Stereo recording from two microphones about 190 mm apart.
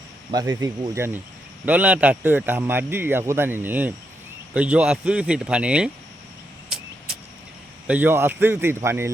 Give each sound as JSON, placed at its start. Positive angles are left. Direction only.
{"t": 0.3, "sound": "speech", "side_deg": -20}
{"t": 6.7, "sound": "vehicle", "side_deg": 0}
{"t": 7.9, "sound": "speech", "side_deg": -10}